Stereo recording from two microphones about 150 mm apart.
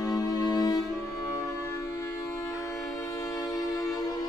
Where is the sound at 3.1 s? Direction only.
25° left (ahead or behind).